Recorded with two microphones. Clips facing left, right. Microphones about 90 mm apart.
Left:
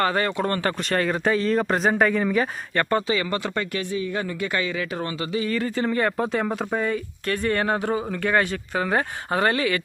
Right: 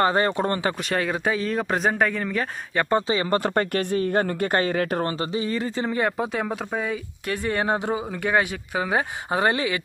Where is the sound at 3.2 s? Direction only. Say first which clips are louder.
Right 4 dB; 40° right (ahead or behind); by 7.3 s 5° right (ahead or behind).